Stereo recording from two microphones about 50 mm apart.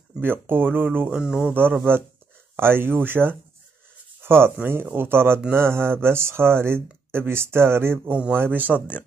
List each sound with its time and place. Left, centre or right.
0.2 s speech: right
1.0 s speech: centre
1.4 s speech: right
4.2 s a sound: right
4.9 s speech: right
8.3 s speech: right